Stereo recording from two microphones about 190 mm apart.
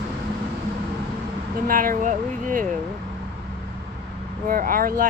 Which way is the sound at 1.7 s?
45° right (ahead or behind).